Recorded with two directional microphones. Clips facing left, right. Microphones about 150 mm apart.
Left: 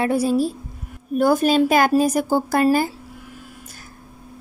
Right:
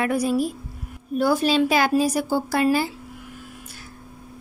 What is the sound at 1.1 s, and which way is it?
Speech, 50° left (ahead or behind).